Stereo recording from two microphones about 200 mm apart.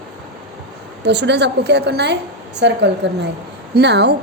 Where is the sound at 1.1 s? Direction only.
60° right (ahead or behind).